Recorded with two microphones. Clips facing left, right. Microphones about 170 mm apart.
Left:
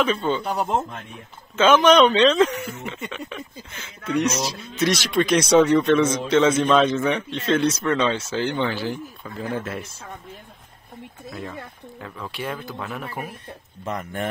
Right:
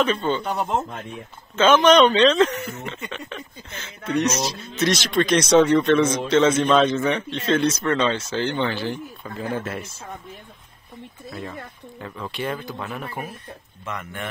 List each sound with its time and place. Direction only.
0.0 s a man's voice: 5° left (ahead or behind)
11.2 s a man's voice: centre (ahead or behind)
13.8 s speech: 35° left (ahead or behind)